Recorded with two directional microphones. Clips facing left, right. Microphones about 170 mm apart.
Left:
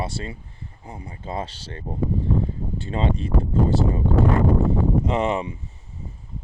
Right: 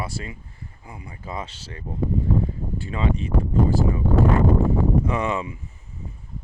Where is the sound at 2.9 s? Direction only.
30° left (ahead or behind).